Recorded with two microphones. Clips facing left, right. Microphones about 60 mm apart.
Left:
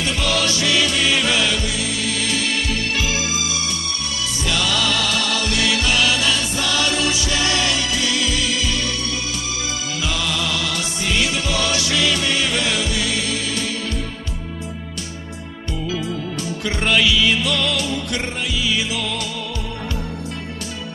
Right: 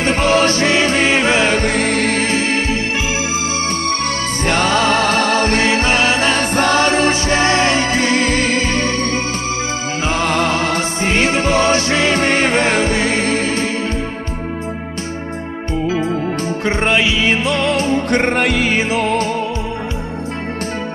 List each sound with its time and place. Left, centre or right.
0.0 s music: right
4.5 s music: right
10.0 s music: right
15.9 s music: right